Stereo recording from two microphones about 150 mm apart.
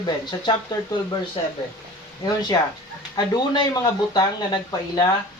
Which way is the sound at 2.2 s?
30° left (ahead or behind).